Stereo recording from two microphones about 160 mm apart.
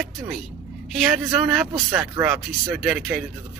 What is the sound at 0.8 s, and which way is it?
Speech, centre (ahead or behind).